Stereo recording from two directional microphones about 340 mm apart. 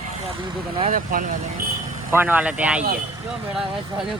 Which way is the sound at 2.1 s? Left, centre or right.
Centre.